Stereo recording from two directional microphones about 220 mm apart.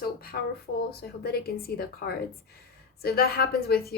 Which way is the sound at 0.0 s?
45° left (ahead or behind).